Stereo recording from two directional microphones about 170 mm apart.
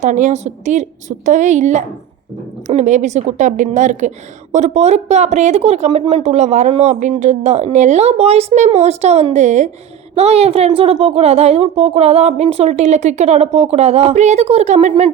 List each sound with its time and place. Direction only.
0.0 s a woman's voice: 45° right (ahead or behind)